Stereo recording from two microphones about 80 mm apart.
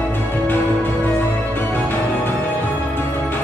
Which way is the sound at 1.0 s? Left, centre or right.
Left.